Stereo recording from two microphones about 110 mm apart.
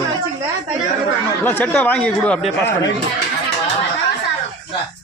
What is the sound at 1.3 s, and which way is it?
Speech, 20° left (ahead or behind).